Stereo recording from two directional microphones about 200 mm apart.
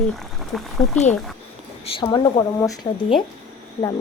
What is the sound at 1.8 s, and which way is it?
Speech, 25° left (ahead or behind).